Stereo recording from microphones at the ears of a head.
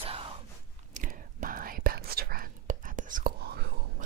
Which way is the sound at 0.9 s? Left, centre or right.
Right.